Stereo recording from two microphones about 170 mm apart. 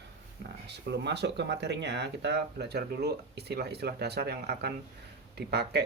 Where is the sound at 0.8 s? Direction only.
90° right.